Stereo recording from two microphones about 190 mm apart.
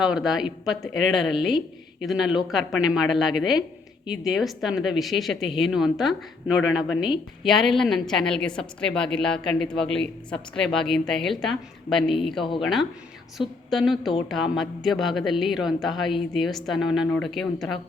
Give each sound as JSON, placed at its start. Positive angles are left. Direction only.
{"t": 0.0, "sound": "a woman's voice", "side_deg": -5}
{"t": 12.4, "sound": "speech", "side_deg": 25}
{"t": 13.4, "sound": "a woman's voice", "side_deg": 0}